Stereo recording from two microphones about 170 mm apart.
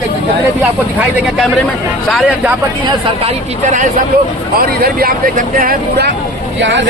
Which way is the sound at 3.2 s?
50° right (ahead or behind).